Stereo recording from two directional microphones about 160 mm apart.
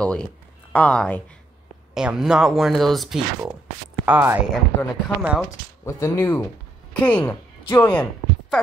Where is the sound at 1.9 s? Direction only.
5° right (ahead or behind).